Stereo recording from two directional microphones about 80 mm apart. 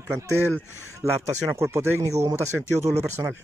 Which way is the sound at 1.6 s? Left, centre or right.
Right.